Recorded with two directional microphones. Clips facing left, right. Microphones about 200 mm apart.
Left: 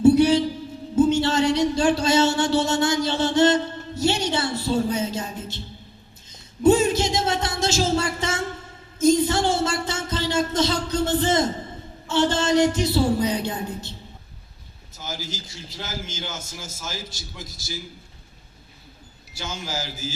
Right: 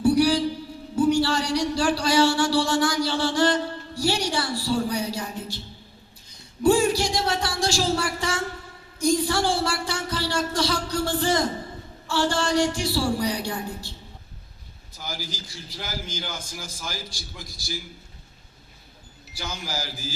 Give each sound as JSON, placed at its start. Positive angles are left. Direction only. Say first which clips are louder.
{"t": 0.0, "sound": "a sound", "louder": "left 4 dB", "side_deg": 25}
{"t": 0.9, "sound": "speech", "louder": "left 2 dB", "side_deg": 25}
{"t": 9.0, "sound": "a sound", "louder": "left 4 dB", "side_deg": 20}
{"t": 12.0, "sound": "speech", "louder": "left 3 dB", "side_deg": 20}
{"t": 14.9, "sound": "a man's voice", "louder": "left 2 dB", "side_deg": 25}
{"t": 19.4, "sound": "speech", "louder": "left 2 dB", "side_deg": 25}